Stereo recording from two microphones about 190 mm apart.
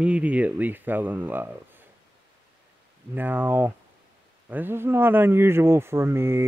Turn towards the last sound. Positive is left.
turn(degrees=-15)  # may be behind; listen again after turning